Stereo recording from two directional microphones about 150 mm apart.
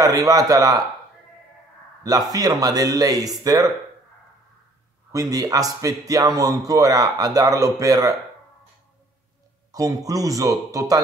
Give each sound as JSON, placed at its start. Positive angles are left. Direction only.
{"t": 0.0, "sound": "a man's voice", "side_deg": -25}
{"t": 2.3, "sound": "a man's voice", "side_deg": -25}
{"t": 5.1, "sound": "a man's voice", "side_deg": -25}
{"t": 9.7, "sound": "a man's voice", "side_deg": -25}